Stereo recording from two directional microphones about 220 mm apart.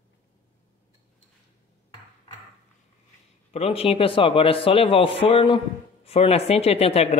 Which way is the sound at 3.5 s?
25° left (ahead or behind).